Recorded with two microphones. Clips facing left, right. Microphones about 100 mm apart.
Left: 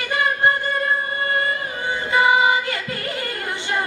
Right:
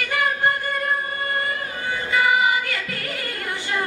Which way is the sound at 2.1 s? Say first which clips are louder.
Left 3 dB; 25° left (ahead or behind).